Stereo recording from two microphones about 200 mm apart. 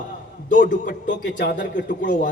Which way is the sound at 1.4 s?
60° left (ahead or behind).